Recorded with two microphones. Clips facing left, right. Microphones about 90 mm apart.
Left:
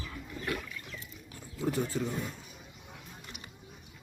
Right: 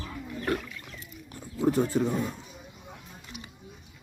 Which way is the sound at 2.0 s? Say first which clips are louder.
Right 7 dB; 65° right (ahead or behind).